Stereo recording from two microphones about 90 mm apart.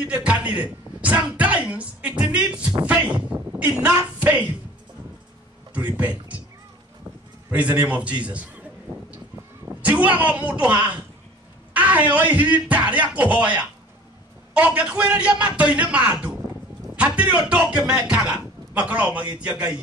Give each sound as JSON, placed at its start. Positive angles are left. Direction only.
{"t": 0.0, "sound": "speech", "side_deg": -10}
{"t": 5.8, "sound": "speech", "side_deg": -20}
{"t": 7.5, "sound": "speech", "side_deg": -15}
{"t": 9.7, "sound": "speech", "side_deg": -15}
{"t": 14.5, "sound": "speech", "side_deg": -15}